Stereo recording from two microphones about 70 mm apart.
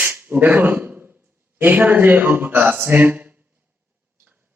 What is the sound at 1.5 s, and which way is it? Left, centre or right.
A man's voice, right.